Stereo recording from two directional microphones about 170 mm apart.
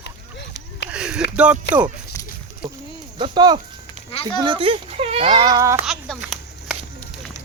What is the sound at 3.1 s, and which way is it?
Speech, 25° right (ahead or behind).